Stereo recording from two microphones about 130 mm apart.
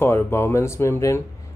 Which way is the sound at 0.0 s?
20° left (ahead or behind).